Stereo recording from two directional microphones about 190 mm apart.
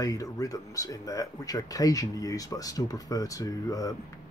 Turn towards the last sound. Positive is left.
turn(degrees=20)  # may be behind; listen again after turning